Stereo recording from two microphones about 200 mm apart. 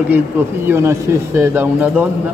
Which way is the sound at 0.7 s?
15° right (ahead or behind).